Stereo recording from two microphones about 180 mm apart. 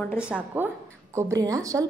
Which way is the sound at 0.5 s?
10° right (ahead or behind).